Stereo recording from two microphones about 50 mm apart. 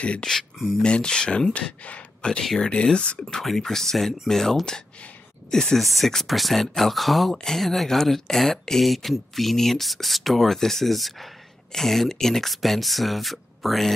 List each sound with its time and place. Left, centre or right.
0.0 s speech: left
0.3 s a sound: centre
0.8 s speech: centre
2.7 s speech: centre
3.3 s speech: centre
5.8 s speech: centre